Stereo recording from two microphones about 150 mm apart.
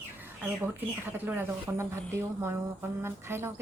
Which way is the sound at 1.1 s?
15° right (ahead or behind).